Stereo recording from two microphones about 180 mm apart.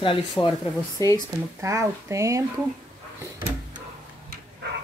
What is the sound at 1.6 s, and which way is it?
Speech, 15° right (ahead or behind).